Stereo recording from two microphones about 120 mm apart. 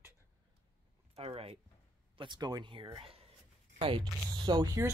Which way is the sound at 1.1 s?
55° right (ahead or behind).